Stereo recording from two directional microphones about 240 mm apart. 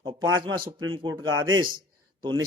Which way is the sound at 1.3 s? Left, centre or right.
Right.